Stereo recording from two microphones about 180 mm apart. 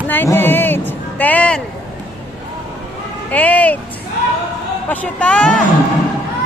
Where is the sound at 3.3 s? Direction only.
10° left (ahead or behind).